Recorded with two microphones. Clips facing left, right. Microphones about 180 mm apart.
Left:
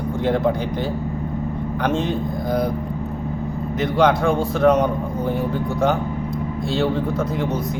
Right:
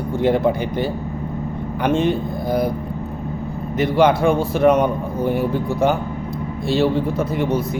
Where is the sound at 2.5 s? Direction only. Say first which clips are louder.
Right 2 dB; 5° right (ahead or behind).